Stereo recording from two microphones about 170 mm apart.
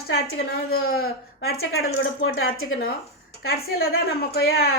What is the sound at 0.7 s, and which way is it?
Speech, 65° left (ahead or behind).